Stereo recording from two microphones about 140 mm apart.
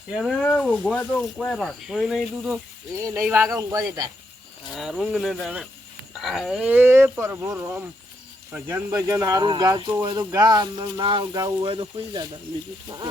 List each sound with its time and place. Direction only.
0.2 s speech: 5° left (ahead or behind)
3.3 s speech: 20° right (ahead or behind)
4.7 s speech: centre (ahead or behind); by 12.2 s 40° right (ahead or behind)